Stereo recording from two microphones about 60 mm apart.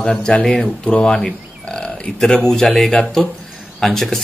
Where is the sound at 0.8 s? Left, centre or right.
Centre.